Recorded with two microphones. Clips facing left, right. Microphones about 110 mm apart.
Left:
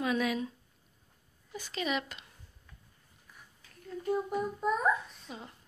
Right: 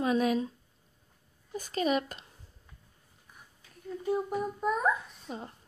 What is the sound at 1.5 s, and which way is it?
Speech, 40° right (ahead or behind).